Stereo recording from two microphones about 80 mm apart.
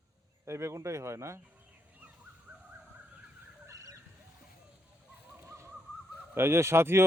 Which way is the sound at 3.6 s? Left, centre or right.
Right.